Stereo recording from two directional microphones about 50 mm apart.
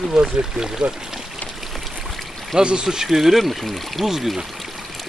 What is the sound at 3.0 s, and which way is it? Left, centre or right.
Speech, centre.